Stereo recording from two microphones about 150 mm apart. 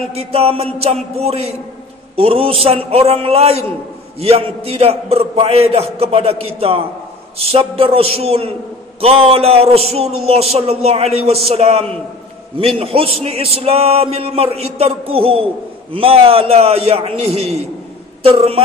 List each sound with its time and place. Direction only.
0.1 s music: 40° right (ahead or behind)
2.1 s a man's voice: 40° right (ahead or behind)
18.2 s music: 40° right (ahead or behind)